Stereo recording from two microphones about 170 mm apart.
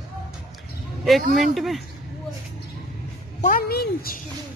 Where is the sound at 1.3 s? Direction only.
Centre (ahead or behind).